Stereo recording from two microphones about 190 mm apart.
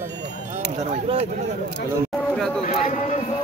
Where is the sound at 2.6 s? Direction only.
40° left (ahead or behind).